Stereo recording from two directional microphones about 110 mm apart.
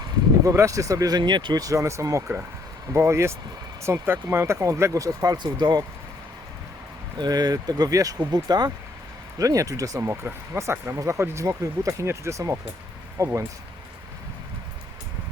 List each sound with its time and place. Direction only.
0.4 s speech: 30° right (ahead or behind)
7.2 s speech: 35° right (ahead or behind)
10.0 s speech: 20° right (ahead or behind)